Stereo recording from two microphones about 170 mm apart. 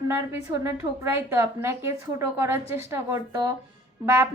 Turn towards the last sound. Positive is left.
turn(degrees=-15)  # may be behind; listen again after turning